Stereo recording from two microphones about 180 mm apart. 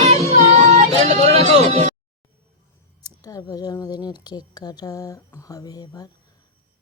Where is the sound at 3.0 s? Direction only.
20° left (ahead or behind).